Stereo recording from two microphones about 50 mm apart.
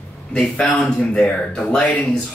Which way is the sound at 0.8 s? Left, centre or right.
Centre.